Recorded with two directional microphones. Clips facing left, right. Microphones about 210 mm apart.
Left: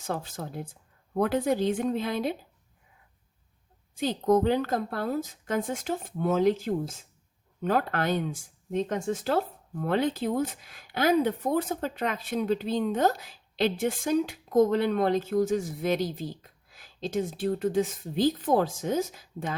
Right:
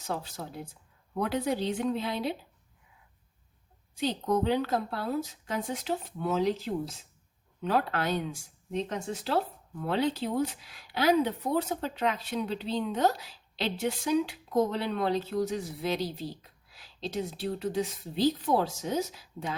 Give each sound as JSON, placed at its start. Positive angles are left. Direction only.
{"t": 0.1, "sound": "speech", "side_deg": 50}
{"t": 3.9, "sound": "speech", "side_deg": 50}